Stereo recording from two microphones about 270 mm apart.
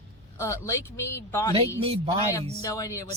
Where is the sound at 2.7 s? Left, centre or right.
Centre.